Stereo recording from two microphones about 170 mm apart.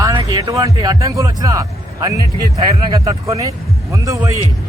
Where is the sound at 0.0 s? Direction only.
20° right (ahead or behind).